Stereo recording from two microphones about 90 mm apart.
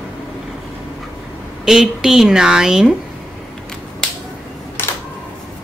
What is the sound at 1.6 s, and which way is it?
Speech, 5° right (ahead or behind).